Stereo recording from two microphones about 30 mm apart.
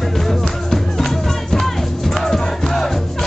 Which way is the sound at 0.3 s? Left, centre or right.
Centre.